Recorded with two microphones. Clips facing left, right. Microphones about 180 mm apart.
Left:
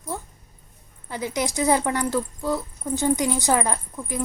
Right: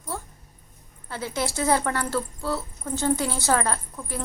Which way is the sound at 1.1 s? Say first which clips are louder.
Left 2 dB; 15° left (ahead or behind).